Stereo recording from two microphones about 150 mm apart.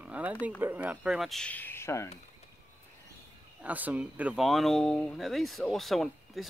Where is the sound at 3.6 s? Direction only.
10° right (ahead or behind).